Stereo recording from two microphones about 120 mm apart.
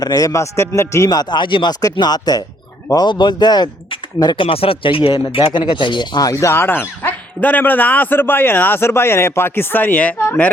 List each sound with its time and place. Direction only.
0.0 s speech: 30° left (ahead or behind)
6.3 s speech: 20° left (ahead or behind)